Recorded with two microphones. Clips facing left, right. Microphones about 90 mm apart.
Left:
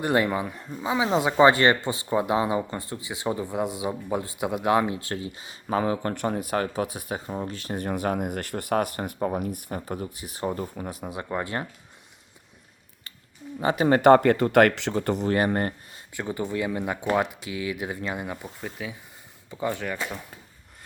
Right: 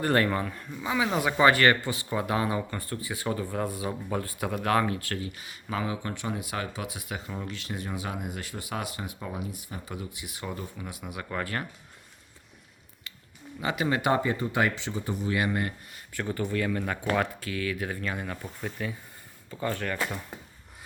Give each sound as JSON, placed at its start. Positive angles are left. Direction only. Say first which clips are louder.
{"t": 0.0, "sound": "speech", "louder": "left 2 dB", "side_deg": 15}
{"t": 0.7, "sound": "speech", "louder": "left 4 dB", "side_deg": 30}
{"t": 5.6, "sound": "speech", "louder": "left 7 dB", "side_deg": 40}
{"t": 13.6, "sound": "speech", "louder": "left 7 dB", "side_deg": 35}
{"t": 15.3, "sound": "speech", "louder": "left 3 dB", "side_deg": 45}
{"t": 16.1, "sound": "speech", "louder": "left 1 dB", "side_deg": 20}
{"t": 18.6, "sound": "speech", "louder": "right 3 dB", "side_deg": 5}
{"t": 19.5, "sound": "speech", "louder": "left 2 dB", "side_deg": 15}
{"t": 20.0, "sound": "speech", "louder": "right 1 dB", "side_deg": -5}